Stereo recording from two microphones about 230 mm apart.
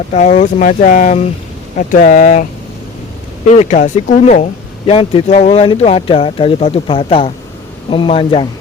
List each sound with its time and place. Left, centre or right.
0.1 s speech: left
3.5 s speech: left